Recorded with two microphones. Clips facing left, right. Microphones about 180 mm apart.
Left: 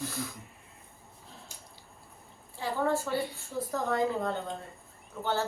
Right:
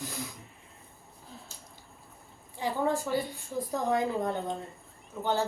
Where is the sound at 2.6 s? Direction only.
15° right (ahead or behind).